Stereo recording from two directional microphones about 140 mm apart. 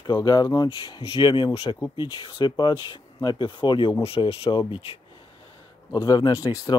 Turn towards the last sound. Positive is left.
turn(degrees=25)  # may be behind; listen again after turning